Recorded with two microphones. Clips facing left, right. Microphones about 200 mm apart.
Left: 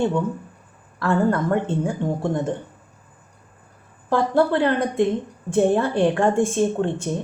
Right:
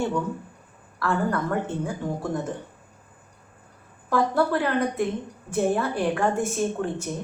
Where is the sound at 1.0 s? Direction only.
25° left (ahead or behind).